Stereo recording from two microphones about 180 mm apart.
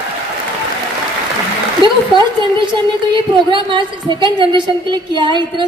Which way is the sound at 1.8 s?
25° right (ahead or behind).